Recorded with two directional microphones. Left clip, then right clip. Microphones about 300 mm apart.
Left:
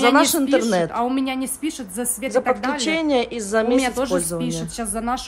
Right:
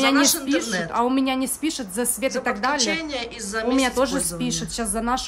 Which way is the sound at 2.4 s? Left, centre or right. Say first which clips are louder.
Left 4 dB; centre.